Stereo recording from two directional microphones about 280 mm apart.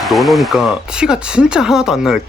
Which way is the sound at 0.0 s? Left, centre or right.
Centre.